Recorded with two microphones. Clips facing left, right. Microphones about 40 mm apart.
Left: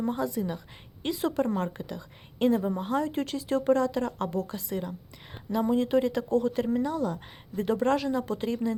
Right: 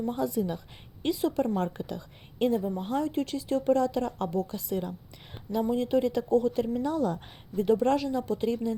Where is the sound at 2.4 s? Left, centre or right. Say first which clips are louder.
Left 2 dB; left.